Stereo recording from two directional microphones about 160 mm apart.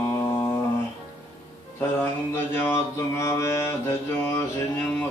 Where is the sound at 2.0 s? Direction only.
15° left (ahead or behind).